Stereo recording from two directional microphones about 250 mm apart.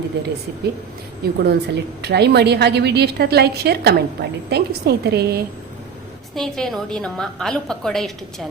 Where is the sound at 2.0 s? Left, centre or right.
Right.